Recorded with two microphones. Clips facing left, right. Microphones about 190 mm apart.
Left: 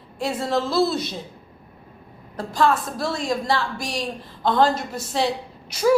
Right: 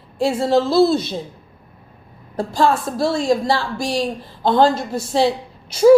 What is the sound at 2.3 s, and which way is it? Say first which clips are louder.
A woman's voice: right 3 dB; 30° right (ahead or behind).